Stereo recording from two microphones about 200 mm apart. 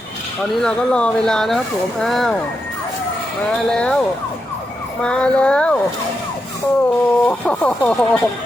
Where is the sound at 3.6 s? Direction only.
5° left (ahead or behind).